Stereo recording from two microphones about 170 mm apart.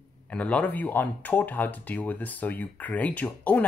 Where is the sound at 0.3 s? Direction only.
10° left (ahead or behind).